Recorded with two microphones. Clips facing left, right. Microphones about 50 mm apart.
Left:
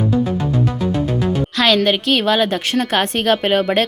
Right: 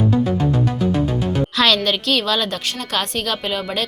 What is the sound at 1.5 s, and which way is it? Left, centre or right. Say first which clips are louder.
Speech: left 2 dB; centre.